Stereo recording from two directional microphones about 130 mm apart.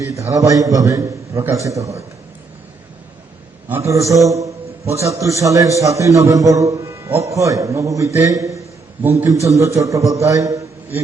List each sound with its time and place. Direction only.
0.0 s a man's voice: 25° right (ahead or behind)
3.8 s a man's voice: 25° right (ahead or behind)